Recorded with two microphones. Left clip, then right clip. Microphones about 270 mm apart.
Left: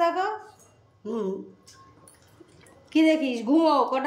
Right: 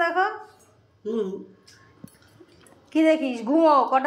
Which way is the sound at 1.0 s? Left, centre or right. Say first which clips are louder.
Right 3 dB; centre.